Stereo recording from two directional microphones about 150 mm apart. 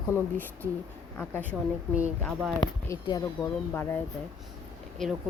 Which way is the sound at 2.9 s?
25° left (ahead or behind).